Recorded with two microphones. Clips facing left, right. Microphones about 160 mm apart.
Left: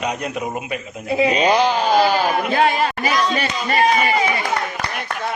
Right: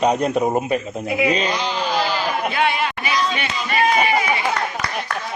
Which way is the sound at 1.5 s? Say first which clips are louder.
Left 6 dB; 50° left (ahead or behind).